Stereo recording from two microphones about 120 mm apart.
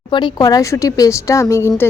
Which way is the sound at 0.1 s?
40° left (ahead or behind).